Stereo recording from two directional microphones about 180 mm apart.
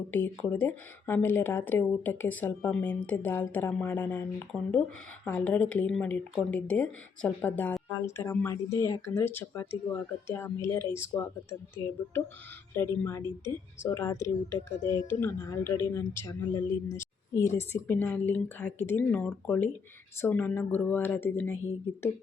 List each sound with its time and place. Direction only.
0.1 s speech: 10° left (ahead or behind)